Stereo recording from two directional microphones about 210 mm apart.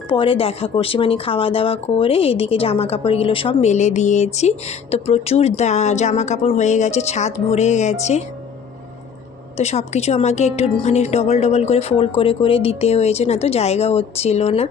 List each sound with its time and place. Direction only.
0.1 s speech: 25° left (ahead or behind)
9.6 s a woman's voice: 30° left (ahead or behind)